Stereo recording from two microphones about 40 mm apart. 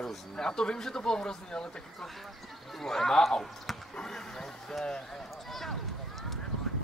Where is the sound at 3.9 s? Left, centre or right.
Centre.